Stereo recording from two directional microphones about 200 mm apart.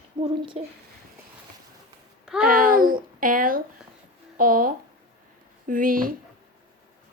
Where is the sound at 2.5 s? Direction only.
45° right (ahead or behind).